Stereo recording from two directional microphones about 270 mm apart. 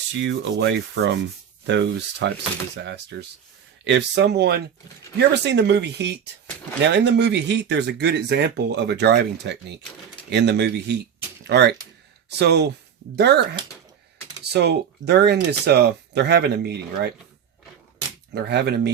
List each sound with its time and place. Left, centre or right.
0.1 s speech: right
18.3 s speech: right